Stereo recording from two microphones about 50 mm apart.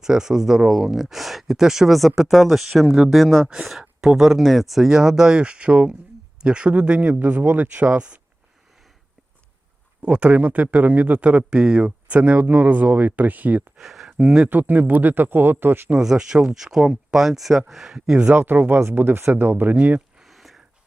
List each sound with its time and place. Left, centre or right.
0.0 s speech: centre
3.4 s a man's voice: centre
10.0 s a man's voice: right
13.7 s a sound: centre
14.2 s speech: centre
14.5 s a man's voice: right
16.0 s speech: centre
18.3 s a man's voice: right
20.2 s a sound: centre